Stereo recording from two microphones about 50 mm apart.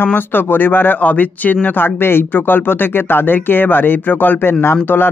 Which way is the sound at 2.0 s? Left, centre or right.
Left.